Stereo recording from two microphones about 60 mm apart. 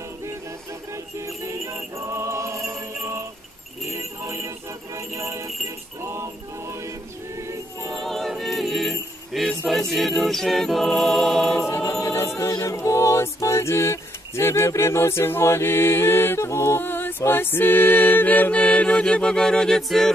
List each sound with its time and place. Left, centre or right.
1.1 s music: right
7.9 s choir: centre
9.3 s music: centre
9.7 s a capella: centre
11.8 s choir: left
12.4 s music: left
12.7 s a sound: left
14.8 s a capella: left
17.3 s mantra: left; by 20.1 s centre